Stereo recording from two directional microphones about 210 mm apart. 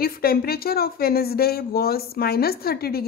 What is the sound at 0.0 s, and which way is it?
A woman's voice, 45° left (ahead or behind).